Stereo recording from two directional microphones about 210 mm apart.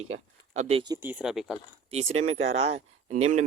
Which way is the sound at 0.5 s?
30° right (ahead or behind).